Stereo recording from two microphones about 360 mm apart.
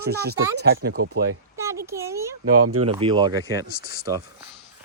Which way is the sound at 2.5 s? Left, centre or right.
Right.